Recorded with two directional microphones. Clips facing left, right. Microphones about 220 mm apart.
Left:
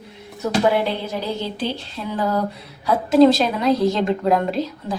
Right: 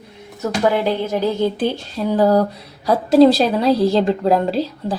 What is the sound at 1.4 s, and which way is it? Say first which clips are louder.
A woman's voice: right 7 dB; 50° right (ahead or behind).